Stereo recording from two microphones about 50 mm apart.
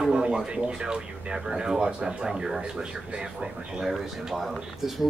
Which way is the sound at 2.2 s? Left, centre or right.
Centre.